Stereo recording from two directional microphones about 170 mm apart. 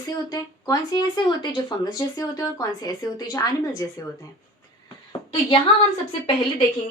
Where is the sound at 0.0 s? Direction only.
25° left (ahead or behind).